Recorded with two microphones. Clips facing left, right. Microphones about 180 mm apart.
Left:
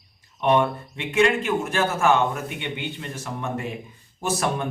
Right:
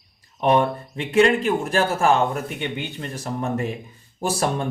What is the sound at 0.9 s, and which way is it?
Speech, 35° right (ahead or behind).